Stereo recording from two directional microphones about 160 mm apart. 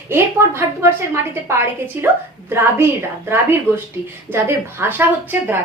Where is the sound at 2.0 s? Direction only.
15° right (ahead or behind).